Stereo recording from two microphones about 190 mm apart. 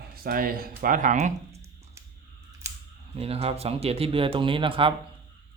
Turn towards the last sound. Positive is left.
turn(degrees=-25)  # may be behind; listen again after turning